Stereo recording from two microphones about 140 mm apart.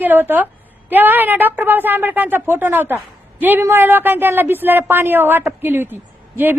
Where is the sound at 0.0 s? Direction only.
15° right (ahead or behind).